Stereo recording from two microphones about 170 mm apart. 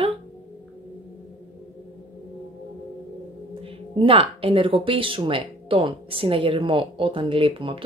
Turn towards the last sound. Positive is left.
turn(degrees=-30)  # may be behind; listen again after turning